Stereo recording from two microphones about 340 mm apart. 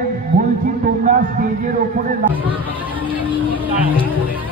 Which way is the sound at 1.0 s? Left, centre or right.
Right.